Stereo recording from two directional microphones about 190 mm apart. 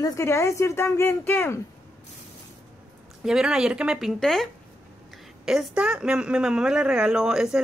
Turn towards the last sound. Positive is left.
turn(degrees=-5)  # may be behind; listen again after turning